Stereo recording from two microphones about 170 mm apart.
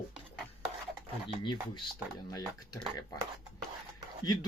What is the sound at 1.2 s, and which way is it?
Speech, 25° left (ahead or behind).